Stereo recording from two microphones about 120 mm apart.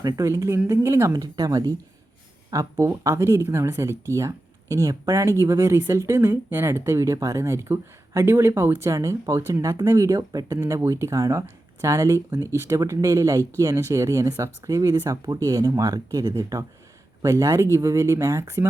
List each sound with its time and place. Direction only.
0.0 s speech: 30° right (ahead or behind)
1.1 s speech: 30° right (ahead or behind)